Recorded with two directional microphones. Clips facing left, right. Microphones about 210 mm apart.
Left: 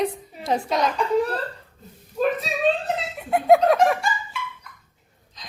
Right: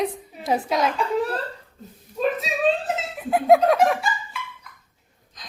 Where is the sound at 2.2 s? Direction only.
5° left (ahead or behind).